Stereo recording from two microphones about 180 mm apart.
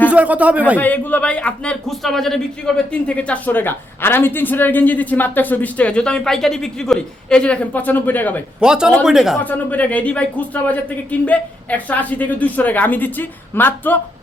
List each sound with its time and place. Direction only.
0.1 s speech: 10° right (ahead or behind)
0.8 s a woman's voice: 10° left (ahead or behind)
8.6 s speech: 5° right (ahead or behind)
9.4 s a woman's voice: 10° left (ahead or behind)